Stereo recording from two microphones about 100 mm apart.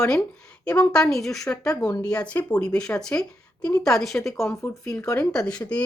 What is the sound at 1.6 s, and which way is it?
Speech, 35° left (ahead or behind).